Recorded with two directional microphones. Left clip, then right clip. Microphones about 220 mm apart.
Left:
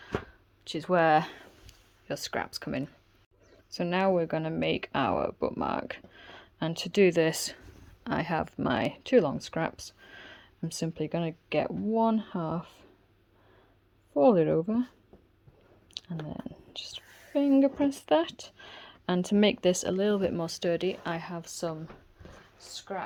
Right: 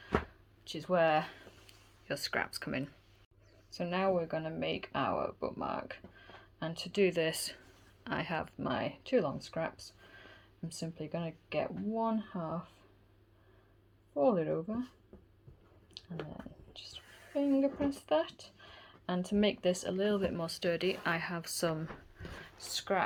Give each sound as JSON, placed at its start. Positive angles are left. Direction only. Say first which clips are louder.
{"t": 0.6, "sound": "speech", "louder": "left 5 dB", "side_deg": 40}
{"t": 2.0, "sound": "speech", "louder": "left 2 dB", "side_deg": 30}
{"t": 3.8, "sound": "speech", "louder": "left 6 dB", "side_deg": 50}
{"t": 14.1, "sound": "speech", "louder": "left 8 dB", "side_deg": 45}
{"t": 16.0, "sound": "speech", "louder": "left 5 dB", "side_deg": 50}
{"t": 21.4, "sound": "speech", "louder": "even", "side_deg": 15}
{"t": 22.7, "sound": "speech", "louder": "right 4 dB", "side_deg": -15}